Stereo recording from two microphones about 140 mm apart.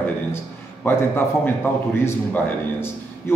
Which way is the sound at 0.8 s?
15° left (ahead or behind).